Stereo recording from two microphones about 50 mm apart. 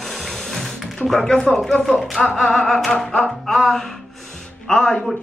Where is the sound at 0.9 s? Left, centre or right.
Centre.